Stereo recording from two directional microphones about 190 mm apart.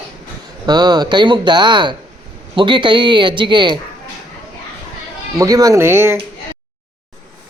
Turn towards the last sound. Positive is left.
turn(degrees=-15)  # may be behind; listen again after turning